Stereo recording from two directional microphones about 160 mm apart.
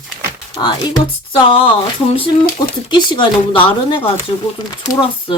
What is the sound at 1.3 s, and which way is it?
Speech, 35° left (ahead or behind).